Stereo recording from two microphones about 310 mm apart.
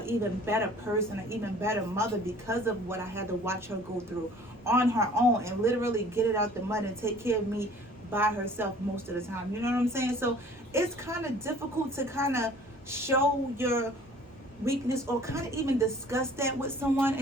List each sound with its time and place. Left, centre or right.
0.0 s a woman's voice: centre
4.6 s a woman's voice: centre